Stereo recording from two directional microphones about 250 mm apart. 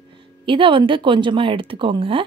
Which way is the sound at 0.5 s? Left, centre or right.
Centre.